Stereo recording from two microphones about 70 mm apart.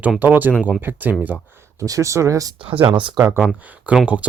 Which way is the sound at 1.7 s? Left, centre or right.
Right.